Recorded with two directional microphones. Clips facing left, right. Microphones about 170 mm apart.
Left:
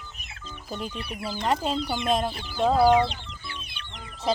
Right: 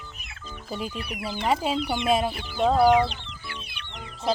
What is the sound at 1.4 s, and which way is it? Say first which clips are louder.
Chicken: right 1 dB; 5° right (ahead or behind).